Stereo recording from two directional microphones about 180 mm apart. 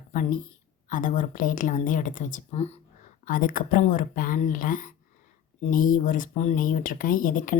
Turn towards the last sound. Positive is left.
turn(degrees=50)  # may be behind; listen again after turning